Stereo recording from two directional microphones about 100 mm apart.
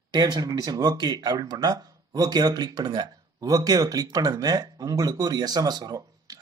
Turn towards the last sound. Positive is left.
turn(degrees=-40)  # may be behind; listen again after turning